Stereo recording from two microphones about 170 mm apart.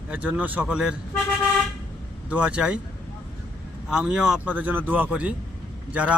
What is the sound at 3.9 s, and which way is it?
Speech, 5° right (ahead or behind).